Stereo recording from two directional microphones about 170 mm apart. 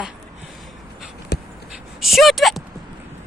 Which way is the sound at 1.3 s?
70° left (ahead or behind).